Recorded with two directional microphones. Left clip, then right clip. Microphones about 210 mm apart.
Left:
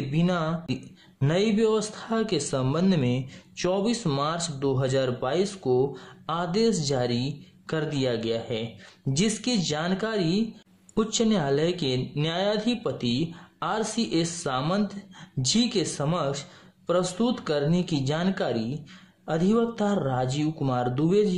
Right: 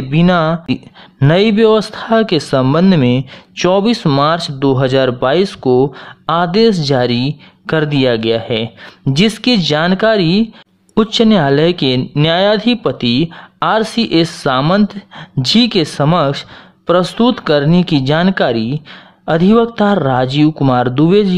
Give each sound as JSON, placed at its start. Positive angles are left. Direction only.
{"t": 0.1, "sound": "speech", "side_deg": -35}